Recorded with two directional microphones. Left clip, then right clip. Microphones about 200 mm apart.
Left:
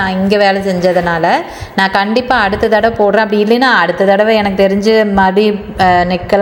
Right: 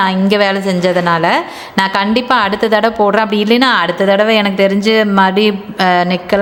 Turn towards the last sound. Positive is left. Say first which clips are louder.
# left 2 dB
turn(degrees=-10)  # may be behind; listen again after turning